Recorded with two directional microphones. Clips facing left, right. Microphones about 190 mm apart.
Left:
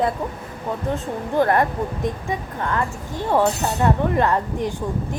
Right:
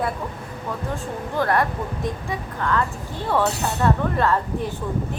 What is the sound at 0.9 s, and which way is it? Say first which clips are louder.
Speech: left 5 dB; 20° left (ahead or behind).